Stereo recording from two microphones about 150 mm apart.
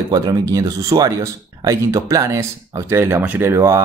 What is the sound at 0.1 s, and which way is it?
Speech, 25° right (ahead or behind).